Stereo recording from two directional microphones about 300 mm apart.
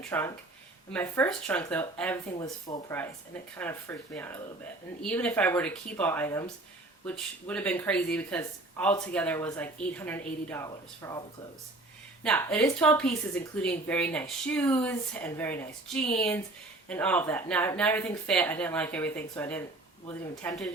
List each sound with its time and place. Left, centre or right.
0.0 s speech: centre
12.2 s speech: centre